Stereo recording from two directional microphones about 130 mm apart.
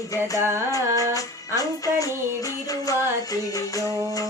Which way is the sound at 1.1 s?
25° left (ahead or behind).